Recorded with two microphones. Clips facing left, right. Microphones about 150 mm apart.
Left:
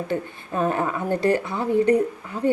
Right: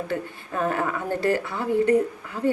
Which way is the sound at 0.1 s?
20° left (ahead or behind).